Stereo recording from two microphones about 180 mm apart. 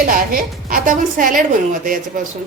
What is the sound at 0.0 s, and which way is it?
A woman's voice, 50° right (ahead or behind).